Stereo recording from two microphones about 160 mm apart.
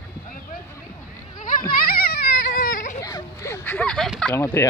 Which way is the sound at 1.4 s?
55° left (ahead or behind).